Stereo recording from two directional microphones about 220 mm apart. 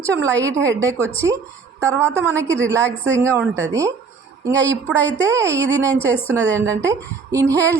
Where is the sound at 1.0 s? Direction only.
10° left (ahead or behind).